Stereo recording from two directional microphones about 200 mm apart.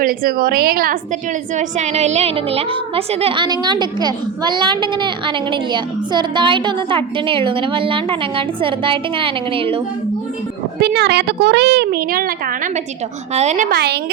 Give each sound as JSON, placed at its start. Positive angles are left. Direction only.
{"t": 0.0, "sound": "a woman's voice", "side_deg": -45}
{"t": 1.5, "sound": "a woman's voice", "side_deg": -35}
{"t": 10.8, "sound": "speech", "side_deg": -55}
{"t": 13.3, "sound": "a woman's voice", "side_deg": -35}
{"t": 13.7, "sound": "speech", "side_deg": -55}